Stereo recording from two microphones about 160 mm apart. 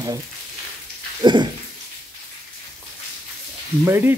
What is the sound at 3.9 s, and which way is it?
Speech, 15° right (ahead or behind).